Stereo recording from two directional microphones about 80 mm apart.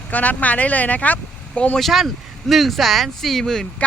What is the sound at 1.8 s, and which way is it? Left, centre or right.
Speech, centre.